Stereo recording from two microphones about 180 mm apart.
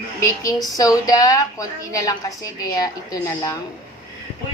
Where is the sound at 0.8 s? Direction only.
20° left (ahead or behind).